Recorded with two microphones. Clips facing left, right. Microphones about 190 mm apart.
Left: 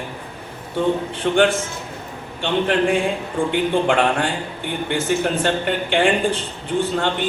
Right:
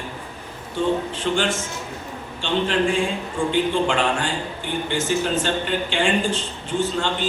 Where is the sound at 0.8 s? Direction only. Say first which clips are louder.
Left 2 dB; 55° left (ahead or behind).